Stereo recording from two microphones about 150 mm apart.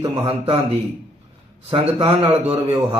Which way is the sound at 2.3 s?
35° right (ahead or behind).